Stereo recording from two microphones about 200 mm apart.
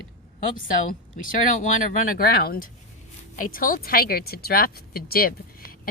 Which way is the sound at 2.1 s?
50° left (ahead or behind).